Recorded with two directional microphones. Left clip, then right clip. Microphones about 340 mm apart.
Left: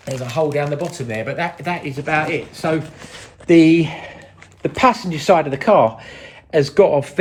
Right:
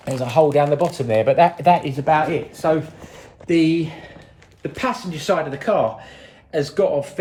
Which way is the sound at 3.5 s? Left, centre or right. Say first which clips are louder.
Left 6 dB; centre.